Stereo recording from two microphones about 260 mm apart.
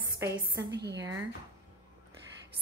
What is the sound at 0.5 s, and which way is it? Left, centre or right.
Speech, right.